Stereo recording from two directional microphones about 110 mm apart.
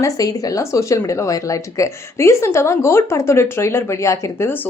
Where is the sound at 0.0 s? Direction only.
35° left (ahead or behind).